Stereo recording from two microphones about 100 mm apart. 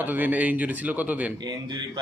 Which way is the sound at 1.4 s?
45° right (ahead or behind).